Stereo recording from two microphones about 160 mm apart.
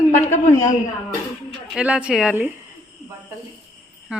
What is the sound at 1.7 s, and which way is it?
Speech, 5° right (ahead or behind).